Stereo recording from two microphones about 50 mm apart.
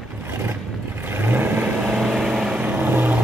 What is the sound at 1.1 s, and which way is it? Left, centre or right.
Vehicle, right.